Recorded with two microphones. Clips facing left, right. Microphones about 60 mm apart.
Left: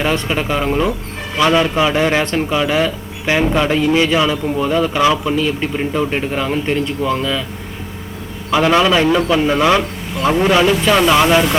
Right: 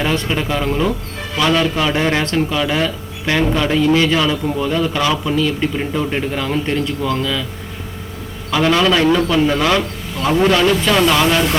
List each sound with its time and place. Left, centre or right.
0.0 s speech: centre
1.9 s speech: centre
8.4 s speech: centre